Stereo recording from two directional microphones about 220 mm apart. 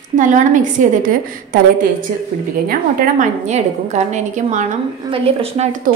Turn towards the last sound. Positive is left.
turn(degrees=-30)  # may be behind; listen again after turning